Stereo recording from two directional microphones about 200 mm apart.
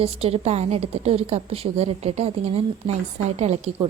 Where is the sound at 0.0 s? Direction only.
30° right (ahead or behind).